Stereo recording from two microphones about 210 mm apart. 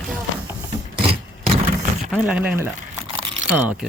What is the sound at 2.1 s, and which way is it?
Speech, 5° right (ahead or behind).